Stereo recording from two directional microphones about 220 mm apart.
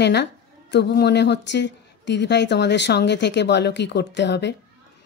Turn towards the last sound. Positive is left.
turn(degrees=50)  # may be behind; listen again after turning